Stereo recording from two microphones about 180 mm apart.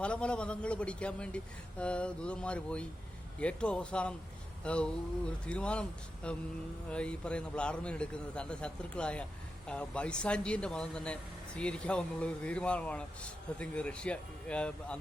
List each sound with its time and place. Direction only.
0.0 s speech: 5° left (ahead or behind)